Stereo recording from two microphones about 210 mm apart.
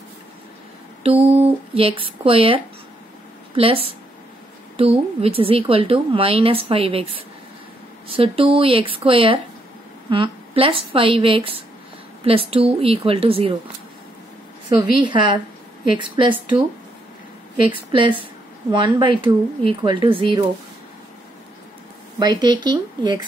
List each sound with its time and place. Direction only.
1.0 s a woman's voice: 25° right (ahead or behind)
8.2 s a woman's voice: 25° right (ahead or behind)
14.8 s a woman's voice: 20° right (ahead or behind)
17.9 s a woman's voice: 25° right (ahead or behind)
22.2 s a woman's voice: 20° right (ahead or behind)